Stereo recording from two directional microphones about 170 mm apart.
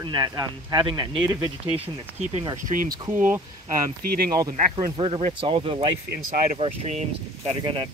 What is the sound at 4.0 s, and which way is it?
Speech, 60° right (ahead or behind).